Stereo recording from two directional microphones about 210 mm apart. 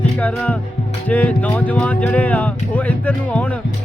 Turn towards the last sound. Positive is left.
turn(degrees=5)  # may be behind; listen again after turning